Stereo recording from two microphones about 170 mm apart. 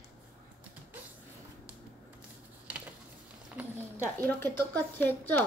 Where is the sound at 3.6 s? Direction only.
5° right (ahead or behind).